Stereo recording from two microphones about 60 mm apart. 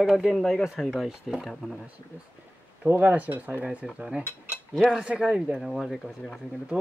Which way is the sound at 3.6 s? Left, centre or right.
Centre.